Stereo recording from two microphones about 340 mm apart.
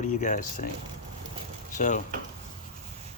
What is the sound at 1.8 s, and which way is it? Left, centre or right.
Speech, left.